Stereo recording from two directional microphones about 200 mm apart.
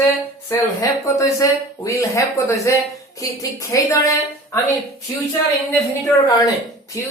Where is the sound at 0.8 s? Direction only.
15° left (ahead or behind).